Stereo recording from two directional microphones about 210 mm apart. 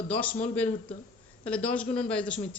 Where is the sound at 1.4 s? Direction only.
5° left (ahead or behind).